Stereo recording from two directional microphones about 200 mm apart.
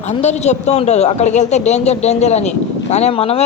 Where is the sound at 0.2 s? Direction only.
35° left (ahead or behind).